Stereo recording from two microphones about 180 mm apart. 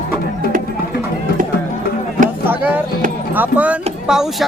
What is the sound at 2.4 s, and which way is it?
Vehicle, 10° right (ahead or behind).